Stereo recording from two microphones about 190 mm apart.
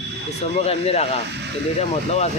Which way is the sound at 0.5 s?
30° left (ahead or behind).